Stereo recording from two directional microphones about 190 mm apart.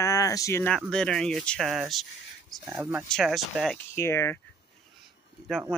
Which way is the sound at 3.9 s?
15° left (ahead or behind).